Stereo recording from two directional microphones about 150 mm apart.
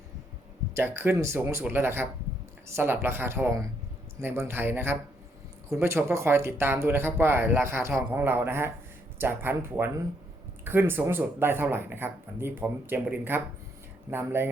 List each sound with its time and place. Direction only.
0.7 s speech: 15° right (ahead or behind)